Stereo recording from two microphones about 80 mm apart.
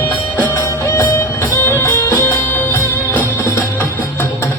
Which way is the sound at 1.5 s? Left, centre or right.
Left.